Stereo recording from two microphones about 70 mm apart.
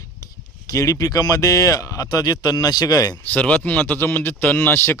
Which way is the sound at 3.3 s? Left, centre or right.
Centre.